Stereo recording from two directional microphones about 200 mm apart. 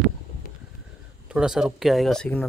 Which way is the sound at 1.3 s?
5° right (ahead or behind).